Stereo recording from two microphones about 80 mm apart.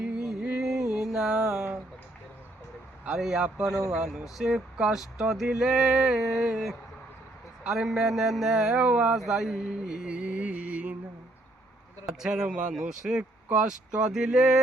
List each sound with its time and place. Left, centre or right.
0.0 s music: centre
3.0 s speech: centre
3.7 s a man's voice: right
3.9 s speech: centre
9.1 s mantra: centre
12.0 s speech: centre